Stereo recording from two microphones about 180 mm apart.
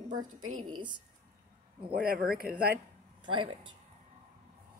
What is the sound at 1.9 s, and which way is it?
Speech, 55° right (ahead or behind).